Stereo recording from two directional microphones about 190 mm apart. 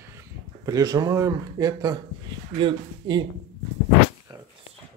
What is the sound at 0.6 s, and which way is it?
A man's voice, 20° right (ahead or behind).